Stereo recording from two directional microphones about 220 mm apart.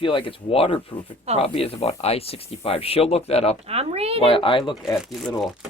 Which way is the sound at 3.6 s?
30° right (ahead or behind).